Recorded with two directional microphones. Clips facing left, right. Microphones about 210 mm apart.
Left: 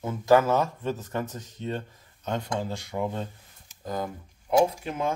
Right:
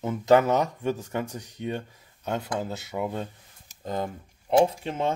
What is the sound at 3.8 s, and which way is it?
Speech, 25° right (ahead or behind).